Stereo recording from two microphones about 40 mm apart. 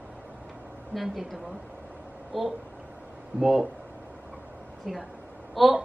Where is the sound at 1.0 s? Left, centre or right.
Centre.